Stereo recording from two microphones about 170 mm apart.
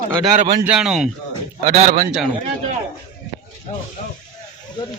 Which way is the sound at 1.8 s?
55° right (ahead or behind).